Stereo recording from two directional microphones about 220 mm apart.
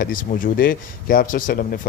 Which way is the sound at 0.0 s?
40° left (ahead or behind).